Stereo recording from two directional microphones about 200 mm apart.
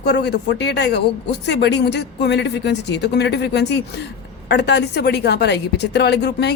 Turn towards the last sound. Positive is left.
turn(degrees=55)  # may be behind; listen again after turning